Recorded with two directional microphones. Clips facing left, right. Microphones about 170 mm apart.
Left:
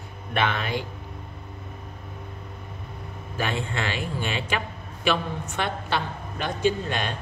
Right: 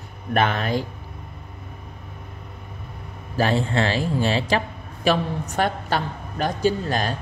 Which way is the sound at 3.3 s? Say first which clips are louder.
Right 7 dB; 35° right (ahead or behind).